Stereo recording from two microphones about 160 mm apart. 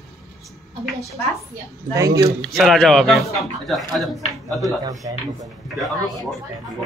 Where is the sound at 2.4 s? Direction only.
Centre (ahead or behind).